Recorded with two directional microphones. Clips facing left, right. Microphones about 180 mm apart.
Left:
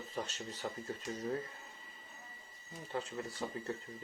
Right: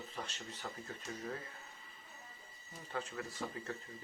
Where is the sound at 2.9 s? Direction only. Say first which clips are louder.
Left 2 dB; 35° left (ahead or behind).